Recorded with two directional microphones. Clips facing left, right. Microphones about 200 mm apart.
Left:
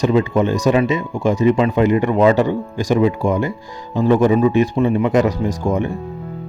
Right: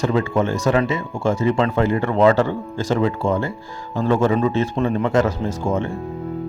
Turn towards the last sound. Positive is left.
turn(degrees=15)  # may be behind; listen again after turning